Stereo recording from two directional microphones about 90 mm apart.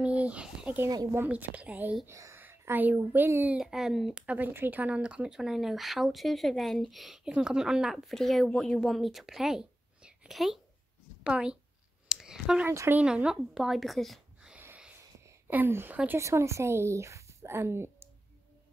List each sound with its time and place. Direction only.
0.0 s speech: 15° right (ahead or behind)
2.0 s a woman's voice: 35° right (ahead or behind)
3.5 s speech: 5° right (ahead or behind)
4.3 s speech: 20° right (ahead or behind)
12.1 s clicking: 5° right (ahead or behind)
12.6 s speech: 25° right (ahead or behind)
13.0 s speech: 10° right (ahead or behind)
15.1 s a sound: 30° right (ahead or behind)
15.5 s a woman's voice: 25° right (ahead or behind)